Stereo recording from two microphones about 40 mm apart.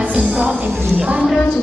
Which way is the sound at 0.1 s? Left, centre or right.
Right.